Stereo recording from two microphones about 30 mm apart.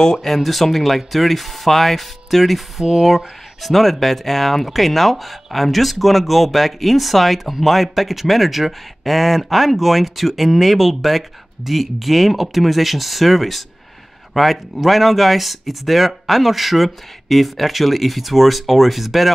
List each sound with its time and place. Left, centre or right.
0.2 s a man's voice: centre